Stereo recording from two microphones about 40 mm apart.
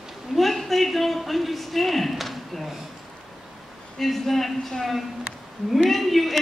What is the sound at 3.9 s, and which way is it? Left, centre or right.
A man's voice, centre.